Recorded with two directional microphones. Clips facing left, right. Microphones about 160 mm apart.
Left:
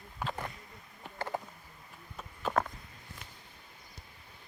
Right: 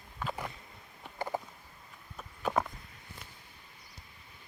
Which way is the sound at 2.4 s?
5° right (ahead or behind).